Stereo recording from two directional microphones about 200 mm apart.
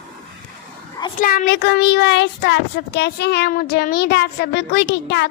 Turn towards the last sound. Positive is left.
turn(degrees=60)  # may be behind; listen again after turning